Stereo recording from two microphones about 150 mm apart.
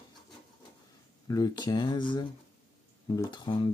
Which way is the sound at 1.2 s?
25° left (ahead or behind).